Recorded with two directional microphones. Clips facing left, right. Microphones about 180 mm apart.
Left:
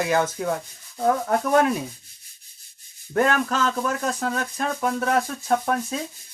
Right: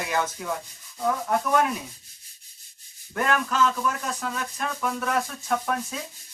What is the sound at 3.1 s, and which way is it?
Speech, 35° left (ahead or behind).